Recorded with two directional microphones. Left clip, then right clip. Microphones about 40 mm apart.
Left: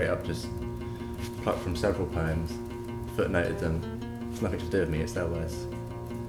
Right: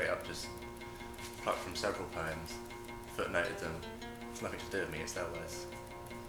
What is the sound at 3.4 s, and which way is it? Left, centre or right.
Speech, left.